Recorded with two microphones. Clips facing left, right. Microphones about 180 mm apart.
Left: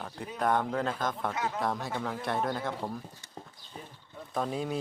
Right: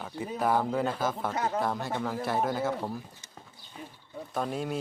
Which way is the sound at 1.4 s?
40° right (ahead or behind).